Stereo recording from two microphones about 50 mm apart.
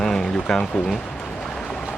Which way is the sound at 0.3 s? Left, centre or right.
Centre.